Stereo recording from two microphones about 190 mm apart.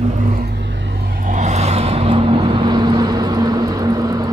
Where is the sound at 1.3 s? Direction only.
40° right (ahead or behind).